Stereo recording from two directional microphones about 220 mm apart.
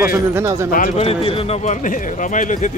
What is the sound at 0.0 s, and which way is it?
Speech, 10° right (ahead or behind).